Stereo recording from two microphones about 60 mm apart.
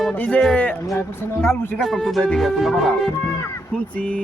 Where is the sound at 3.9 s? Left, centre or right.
Left.